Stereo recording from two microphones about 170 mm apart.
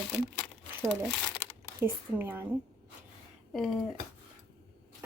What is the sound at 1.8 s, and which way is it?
Speech, 10° right (ahead or behind).